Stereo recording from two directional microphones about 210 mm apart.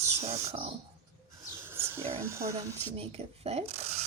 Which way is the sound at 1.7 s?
10° right (ahead or behind).